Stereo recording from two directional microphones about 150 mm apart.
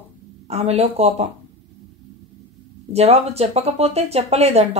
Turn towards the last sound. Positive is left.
turn(degrees=-45)  # may be behind; listen again after turning